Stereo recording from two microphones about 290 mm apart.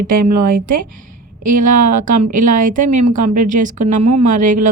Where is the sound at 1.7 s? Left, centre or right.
Right.